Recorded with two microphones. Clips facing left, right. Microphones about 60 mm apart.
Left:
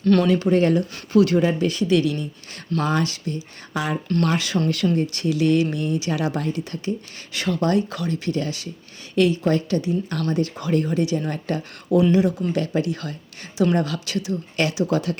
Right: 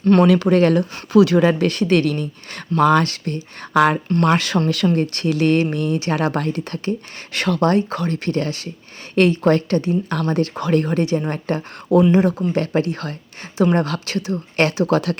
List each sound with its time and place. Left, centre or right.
0.0 s speech: right
0.3 s speech: right
7.7 s speech: right
11.3 s speech: right